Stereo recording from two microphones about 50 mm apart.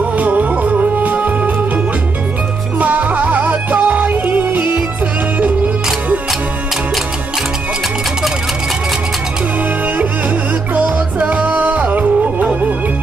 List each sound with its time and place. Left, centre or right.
0.2 s music: right
2.8 s music: right
10.7 s music: right